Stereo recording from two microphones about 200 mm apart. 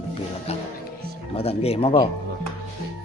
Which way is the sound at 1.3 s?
30° left (ahead or behind).